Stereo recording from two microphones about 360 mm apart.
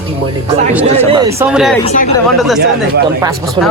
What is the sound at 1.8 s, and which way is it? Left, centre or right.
Speech, centre.